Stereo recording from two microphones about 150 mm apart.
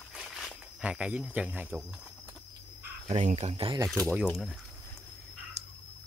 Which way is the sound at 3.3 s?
40° right (ahead or behind).